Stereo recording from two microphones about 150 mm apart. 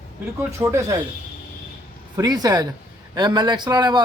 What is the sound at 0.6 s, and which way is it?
Speech, 15° right (ahead or behind).